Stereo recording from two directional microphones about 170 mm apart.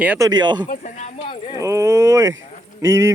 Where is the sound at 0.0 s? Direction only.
10° right (ahead or behind).